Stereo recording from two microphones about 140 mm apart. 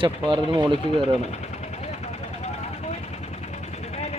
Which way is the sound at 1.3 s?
50° left (ahead or behind).